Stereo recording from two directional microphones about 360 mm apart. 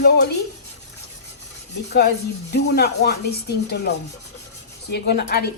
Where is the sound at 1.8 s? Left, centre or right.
Left.